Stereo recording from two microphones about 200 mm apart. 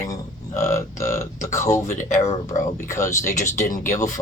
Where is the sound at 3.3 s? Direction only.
40° left (ahead or behind).